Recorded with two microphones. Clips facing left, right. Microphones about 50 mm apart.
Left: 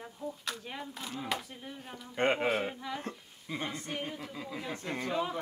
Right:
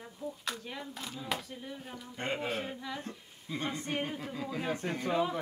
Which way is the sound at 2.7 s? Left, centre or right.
Centre.